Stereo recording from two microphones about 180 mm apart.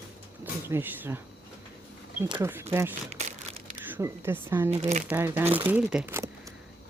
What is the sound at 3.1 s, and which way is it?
Crumpling, 35° right (ahead or behind).